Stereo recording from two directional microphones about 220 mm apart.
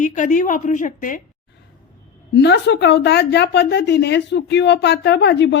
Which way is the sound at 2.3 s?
50° left (ahead or behind).